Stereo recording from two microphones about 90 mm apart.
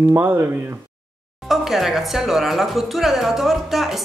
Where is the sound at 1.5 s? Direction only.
Centre (ahead or behind).